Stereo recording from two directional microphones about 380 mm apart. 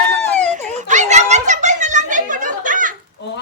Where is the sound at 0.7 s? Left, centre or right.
Centre.